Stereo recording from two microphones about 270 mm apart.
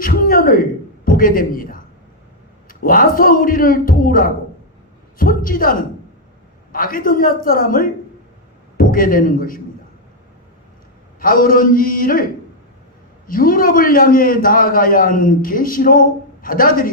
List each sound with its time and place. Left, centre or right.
0.0 s a man's voice: left
6.7 s a man's voice: left
11.2 s a man's voice: left
13.2 s a man's voice: left